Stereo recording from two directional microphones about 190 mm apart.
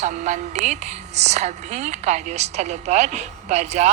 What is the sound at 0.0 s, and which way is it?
A woman's voice, 40° right (ahead or behind).